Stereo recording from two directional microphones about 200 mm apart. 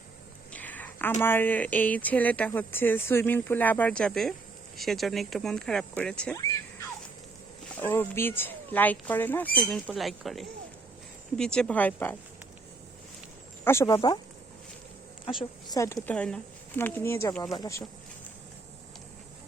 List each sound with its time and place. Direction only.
0.5 s a sound: 10° left (ahead or behind)
1.2 s speech: 10° left (ahead or behind)
7.8 s speech: 10° left (ahead or behind)
13.7 s speech: 15° left (ahead or behind)
15.7 s speech: 15° left (ahead or behind)